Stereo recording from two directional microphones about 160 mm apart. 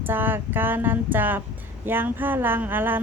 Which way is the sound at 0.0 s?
10° right (ahead or behind).